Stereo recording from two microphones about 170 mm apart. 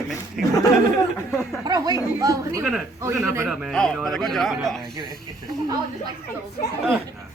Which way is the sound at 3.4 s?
5° left (ahead or behind).